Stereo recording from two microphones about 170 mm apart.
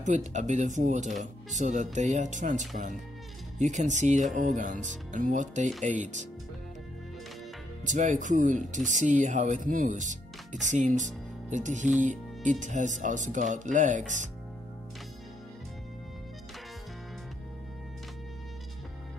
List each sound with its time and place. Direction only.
0.0 s speech: 45° right (ahead or behind)
7.8 s speech: 45° right (ahead or behind)